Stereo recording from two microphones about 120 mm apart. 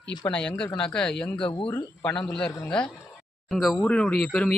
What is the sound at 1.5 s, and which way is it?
Speech, 45° left (ahead or behind).